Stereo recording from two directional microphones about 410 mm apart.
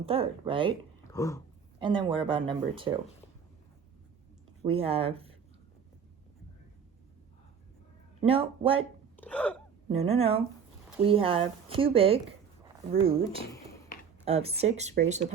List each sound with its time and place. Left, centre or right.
0.0 s speech: centre
1.1 s a sound: centre
1.8 s speech: centre
4.7 s speech: centre
8.2 s speech: centre
9.1 s hiccup: centre
9.9 s speech: centre